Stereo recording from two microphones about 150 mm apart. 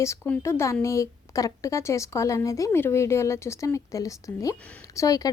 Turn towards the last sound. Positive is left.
turn(degrees=25)  # may be behind; listen again after turning